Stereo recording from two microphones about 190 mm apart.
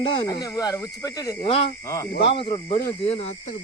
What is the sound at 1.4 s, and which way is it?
Frog, 30° left (ahead or behind).